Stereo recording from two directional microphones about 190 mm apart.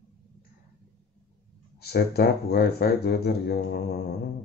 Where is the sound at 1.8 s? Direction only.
55° left (ahead or behind).